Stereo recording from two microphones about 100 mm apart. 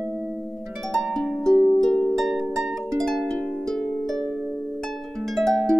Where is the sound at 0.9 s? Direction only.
Centre (ahead or behind).